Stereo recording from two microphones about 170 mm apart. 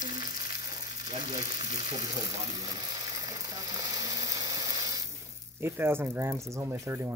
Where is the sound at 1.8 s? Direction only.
25° right (ahead or behind).